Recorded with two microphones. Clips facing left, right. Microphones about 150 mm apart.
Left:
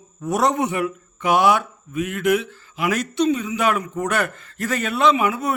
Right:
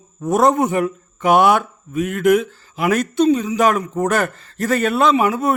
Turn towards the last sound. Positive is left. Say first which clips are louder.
# right 3 dB
turn(degrees=-40)  # may be behind; listen again after turning